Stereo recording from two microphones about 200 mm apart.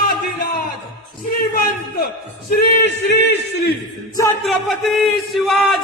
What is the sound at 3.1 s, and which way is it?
Speech, 60° left (ahead or behind).